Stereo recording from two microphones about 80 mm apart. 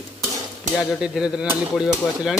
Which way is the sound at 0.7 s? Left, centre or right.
Centre.